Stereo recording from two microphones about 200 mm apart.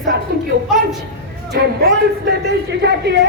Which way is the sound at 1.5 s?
55° right (ahead or behind).